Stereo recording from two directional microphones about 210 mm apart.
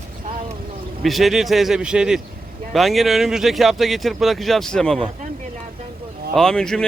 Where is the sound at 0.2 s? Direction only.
40° right (ahead or behind).